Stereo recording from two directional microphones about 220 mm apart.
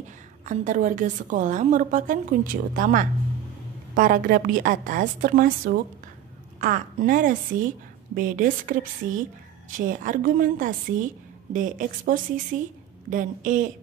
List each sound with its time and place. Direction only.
0.5 s a woman's voice: 35° right (ahead or behind)